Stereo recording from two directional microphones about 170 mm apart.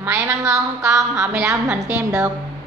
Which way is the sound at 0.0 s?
15° right (ahead or behind).